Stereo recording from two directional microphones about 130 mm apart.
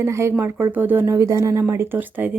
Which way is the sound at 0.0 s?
20° right (ahead or behind).